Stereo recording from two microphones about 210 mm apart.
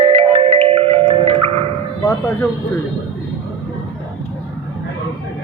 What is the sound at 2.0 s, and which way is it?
Speech, 15° left (ahead or behind).